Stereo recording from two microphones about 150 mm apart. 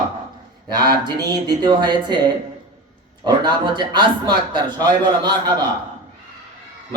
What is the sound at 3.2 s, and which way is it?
Speech, 30° right (ahead or behind).